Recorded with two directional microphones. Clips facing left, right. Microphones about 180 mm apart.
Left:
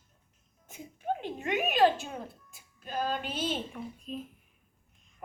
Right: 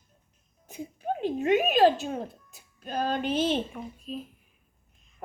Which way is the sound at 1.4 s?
35° right (ahead or behind).